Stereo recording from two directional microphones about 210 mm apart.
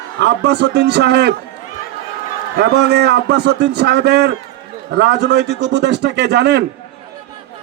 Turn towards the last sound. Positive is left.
turn(degrees=-55)  # may be behind; listen again after turning